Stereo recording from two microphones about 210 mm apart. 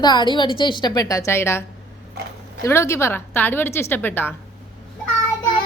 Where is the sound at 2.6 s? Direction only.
10° left (ahead or behind).